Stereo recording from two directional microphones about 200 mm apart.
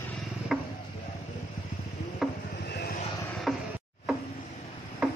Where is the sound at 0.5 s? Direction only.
Centre (ahead or behind).